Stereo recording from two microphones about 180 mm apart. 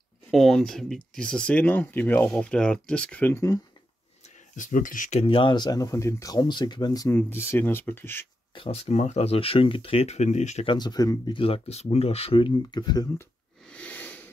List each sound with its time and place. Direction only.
0.3 s speech: centre (ahead or behind)
4.2 s speech: 45° left (ahead or behind)
5.2 s speech: 30° left (ahead or behind); by 8.3 s 10° left (ahead or behind)
8.5 s speech: 35° left (ahead or behind)
10.7 s speech: 25° left (ahead or behind)
13.7 s a sound: 5° left (ahead or behind)